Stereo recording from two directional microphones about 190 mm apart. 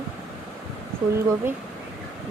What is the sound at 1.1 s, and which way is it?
Speech, 10° right (ahead or behind).